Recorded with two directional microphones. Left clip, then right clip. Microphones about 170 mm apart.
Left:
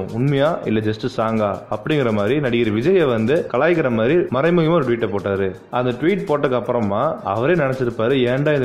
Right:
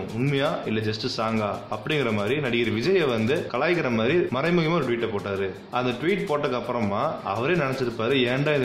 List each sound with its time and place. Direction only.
0.2 s speech: 30° left (ahead or behind)